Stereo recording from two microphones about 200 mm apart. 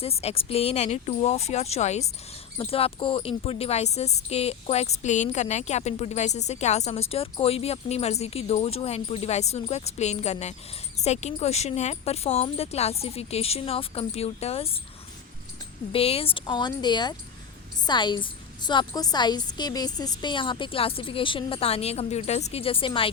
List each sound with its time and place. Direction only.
0.0 s a woman's voice: 30° left (ahead or behind)
15.9 s a woman's voice: 30° left (ahead or behind)